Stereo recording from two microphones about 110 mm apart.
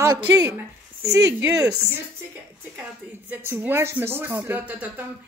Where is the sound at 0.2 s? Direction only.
15° right (ahead or behind).